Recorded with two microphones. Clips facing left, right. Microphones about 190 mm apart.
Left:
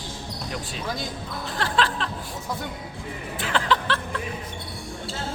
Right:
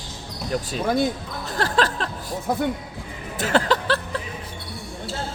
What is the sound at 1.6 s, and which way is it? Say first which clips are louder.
Music: right 3 dB; 40° right (ahead or behind).